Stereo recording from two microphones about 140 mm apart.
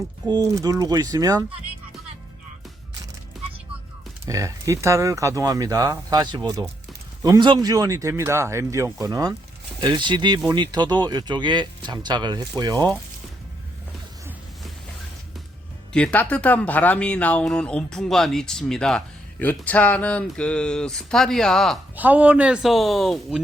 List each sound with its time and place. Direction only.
0.3 s speech: 25° right (ahead or behind)
4.3 s speech: 25° right (ahead or behind)
15.9 s speech: 10° left (ahead or behind)
21.9 s speech: 10° right (ahead or behind)